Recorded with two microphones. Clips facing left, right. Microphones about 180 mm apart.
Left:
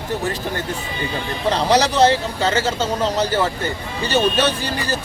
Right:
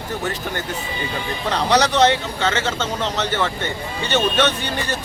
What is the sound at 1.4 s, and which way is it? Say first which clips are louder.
A man's voice: left 2 dB; 30° left (ahead or behind).